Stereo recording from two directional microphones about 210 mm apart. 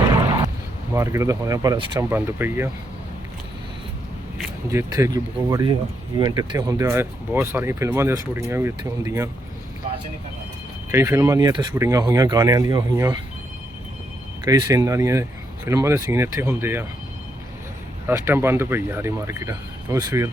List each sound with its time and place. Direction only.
0.9 s speech: 15° right (ahead or behind)
4.7 s speech: 15° right (ahead or behind)
10.9 s speech: 10° right (ahead or behind)
14.4 s speech: 15° right (ahead or behind)
18.1 s speech: 10° right (ahead or behind)